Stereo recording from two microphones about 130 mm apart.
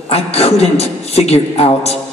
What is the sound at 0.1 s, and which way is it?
A man's voice, 50° left (ahead or behind).